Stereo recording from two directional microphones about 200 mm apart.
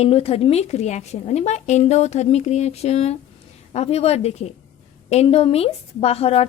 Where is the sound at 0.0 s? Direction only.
30° left (ahead or behind).